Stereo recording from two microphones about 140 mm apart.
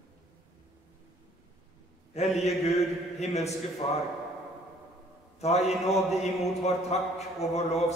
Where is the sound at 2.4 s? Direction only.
50° left (ahead or behind).